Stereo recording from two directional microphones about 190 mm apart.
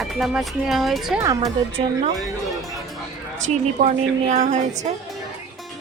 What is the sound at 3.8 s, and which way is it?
Speech, 40° right (ahead or behind).